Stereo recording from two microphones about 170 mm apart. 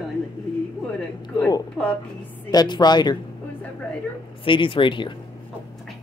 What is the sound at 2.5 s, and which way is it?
Speech, 25° left (ahead or behind).